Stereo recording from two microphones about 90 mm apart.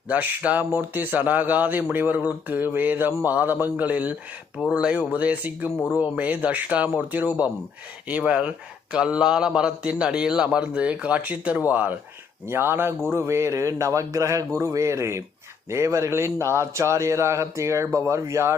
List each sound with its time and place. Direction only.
0.1 s speech: 15° right (ahead or behind)
5.7 s speech: 10° left (ahead or behind)
6.0 s speech: 15° right (ahead or behind); by 18.5 s 35° right (ahead or behind)